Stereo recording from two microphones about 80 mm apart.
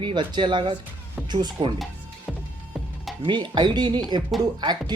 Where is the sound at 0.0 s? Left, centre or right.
Right.